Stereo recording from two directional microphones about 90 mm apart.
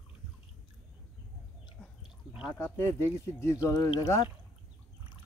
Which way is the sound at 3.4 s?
30° left (ahead or behind).